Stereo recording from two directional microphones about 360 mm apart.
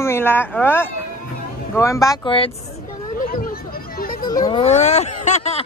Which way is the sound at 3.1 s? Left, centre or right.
Left.